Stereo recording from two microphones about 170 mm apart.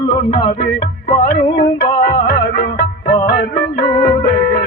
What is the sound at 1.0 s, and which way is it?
Music, 45° left (ahead or behind).